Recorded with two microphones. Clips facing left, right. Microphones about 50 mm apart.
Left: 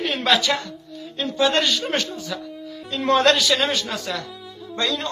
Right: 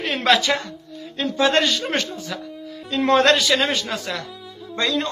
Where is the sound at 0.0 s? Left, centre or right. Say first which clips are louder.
Right 2 dB; right.